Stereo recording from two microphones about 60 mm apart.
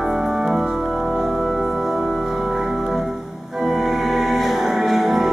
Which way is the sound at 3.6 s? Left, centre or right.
Centre.